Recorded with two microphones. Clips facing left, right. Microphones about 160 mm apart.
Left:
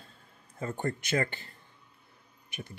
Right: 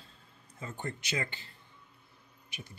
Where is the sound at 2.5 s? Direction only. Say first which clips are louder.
Left 6 dB; 55° left (ahead or behind).